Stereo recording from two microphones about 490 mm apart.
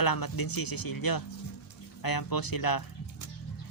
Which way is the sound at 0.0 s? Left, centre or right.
Left.